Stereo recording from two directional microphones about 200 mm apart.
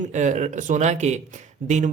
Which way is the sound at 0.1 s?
35° right (ahead or behind).